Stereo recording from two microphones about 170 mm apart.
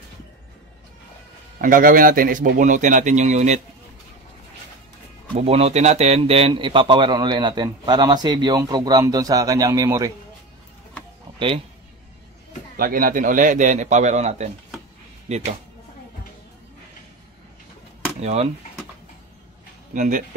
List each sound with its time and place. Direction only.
1.6 s a man's voice: 55° right (ahead or behind)
5.4 s a man's voice: 35° right (ahead or behind); by 10.1 s 20° right (ahead or behind)
11.3 s speech: 30° right (ahead or behind)
12.7 s a man's voice: 60° right (ahead or behind); by 15.4 s 40° right (ahead or behind)
18.2 s speech: 40° right (ahead or behind)
19.9 s a man's voice: 50° right (ahead or behind)